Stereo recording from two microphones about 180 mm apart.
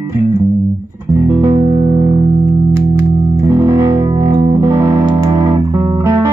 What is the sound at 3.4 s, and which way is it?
Music, 20° right (ahead or behind).